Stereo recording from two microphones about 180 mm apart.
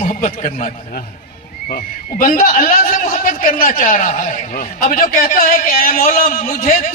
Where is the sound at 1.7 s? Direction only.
50° left (ahead or behind).